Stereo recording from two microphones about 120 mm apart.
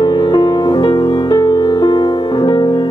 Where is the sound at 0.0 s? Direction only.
35° left (ahead or behind).